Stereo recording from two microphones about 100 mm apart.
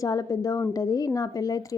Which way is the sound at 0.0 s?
35° left (ahead or behind).